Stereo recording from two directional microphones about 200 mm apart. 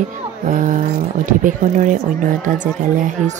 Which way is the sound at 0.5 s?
40° right (ahead or behind).